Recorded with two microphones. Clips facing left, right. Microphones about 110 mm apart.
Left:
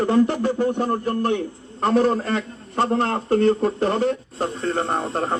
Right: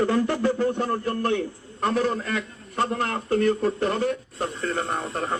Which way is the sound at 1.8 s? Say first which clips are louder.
Left 5 dB; 35° left (ahead or behind).